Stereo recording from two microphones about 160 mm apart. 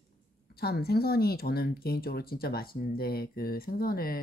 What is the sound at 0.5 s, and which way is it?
Speech, 75° left (ahead or behind).